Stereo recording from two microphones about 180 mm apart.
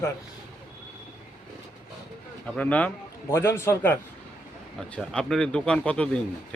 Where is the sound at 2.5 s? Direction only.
10° left (ahead or behind).